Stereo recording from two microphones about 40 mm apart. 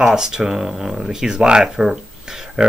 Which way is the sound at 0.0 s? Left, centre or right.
Centre.